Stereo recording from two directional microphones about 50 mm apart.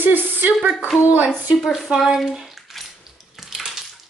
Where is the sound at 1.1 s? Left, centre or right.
Right.